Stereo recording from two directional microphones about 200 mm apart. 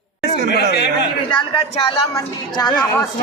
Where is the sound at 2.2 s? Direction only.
20° left (ahead or behind).